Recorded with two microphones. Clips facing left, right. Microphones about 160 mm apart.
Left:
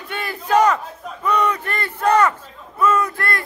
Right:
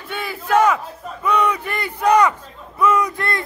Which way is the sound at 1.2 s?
10° right (ahead or behind).